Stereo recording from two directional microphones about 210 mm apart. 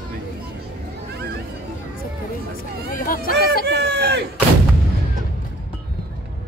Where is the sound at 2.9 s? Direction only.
40° left (ahead or behind).